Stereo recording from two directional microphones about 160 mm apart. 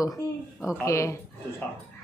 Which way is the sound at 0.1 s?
5° right (ahead or behind).